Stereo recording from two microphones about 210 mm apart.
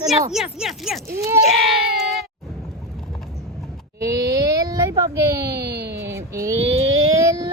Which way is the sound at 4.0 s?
15° right (ahead or behind).